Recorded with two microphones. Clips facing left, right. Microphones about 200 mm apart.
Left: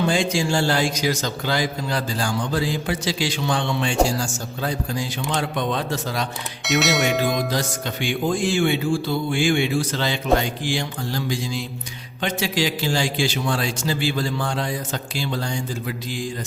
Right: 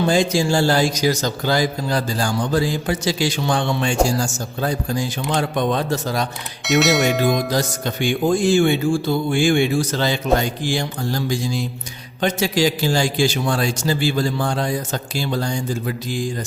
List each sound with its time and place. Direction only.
0.1 s a man's voice: 40° right (ahead or behind)
6.7 s speech: centre (ahead or behind)
7.5 s speech: 45° right (ahead or behind)